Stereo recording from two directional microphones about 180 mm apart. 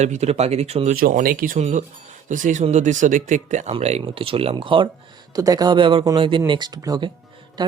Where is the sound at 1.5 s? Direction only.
40° right (ahead or behind).